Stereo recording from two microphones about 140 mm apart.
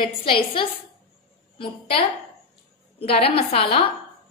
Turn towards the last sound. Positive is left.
turn(degrees=40)  # may be behind; listen again after turning